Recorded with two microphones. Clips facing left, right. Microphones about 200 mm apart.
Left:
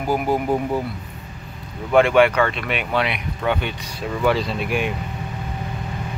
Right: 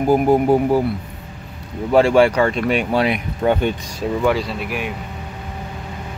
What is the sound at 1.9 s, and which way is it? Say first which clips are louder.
Speech: right 2 dB; 30° right (ahead or behind).